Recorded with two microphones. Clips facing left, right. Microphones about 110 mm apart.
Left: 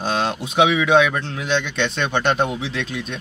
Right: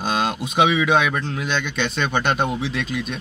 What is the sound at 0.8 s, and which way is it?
Speech, 5° right (ahead or behind).